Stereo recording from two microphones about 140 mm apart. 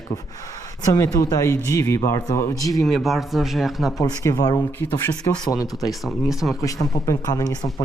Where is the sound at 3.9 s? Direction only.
25° left (ahead or behind).